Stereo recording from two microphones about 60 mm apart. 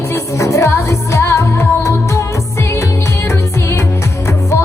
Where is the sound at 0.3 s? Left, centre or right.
Left.